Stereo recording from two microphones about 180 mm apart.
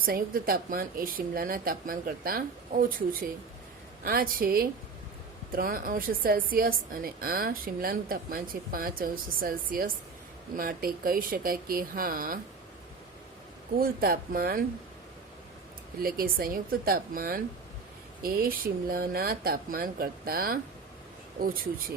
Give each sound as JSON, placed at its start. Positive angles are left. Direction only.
{"t": 0.0, "sound": "a woman's voice", "side_deg": -55}
{"t": 13.7, "sound": "a woman's voice", "side_deg": -55}
{"t": 16.0, "sound": "a woman's voice", "side_deg": -55}